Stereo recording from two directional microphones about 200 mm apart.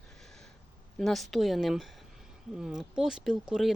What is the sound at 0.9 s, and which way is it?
Speech, centre (ahead or behind).